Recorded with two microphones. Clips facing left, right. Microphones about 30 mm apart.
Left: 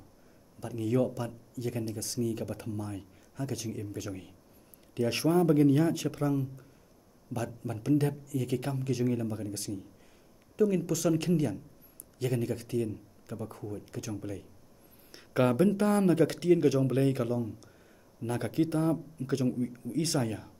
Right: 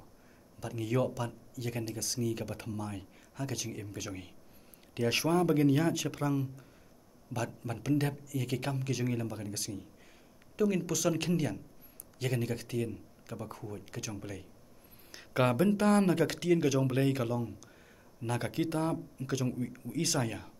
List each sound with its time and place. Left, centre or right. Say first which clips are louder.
0.6 s speech: left 3 dB; right
4.9 s speech: left 2 dB; right
5.3 s speech: left 4 dB; right
15.1 s a sound: right 2 dB; right
15.5 s speech: left 1 dB; right
19.4 s speech: left 6 dB; right
19.7 s speech: left 2 dB; right
20.2 s speech: left 2 dB; right